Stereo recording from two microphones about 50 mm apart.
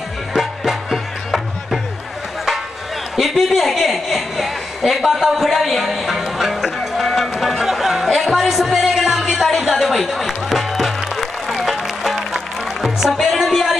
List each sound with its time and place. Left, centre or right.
0.3 s music: centre
3.2 s a sound: centre
12.8 s music: centre